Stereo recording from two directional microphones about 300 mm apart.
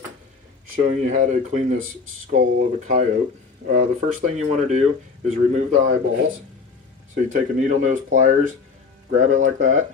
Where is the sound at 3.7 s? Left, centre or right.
Right.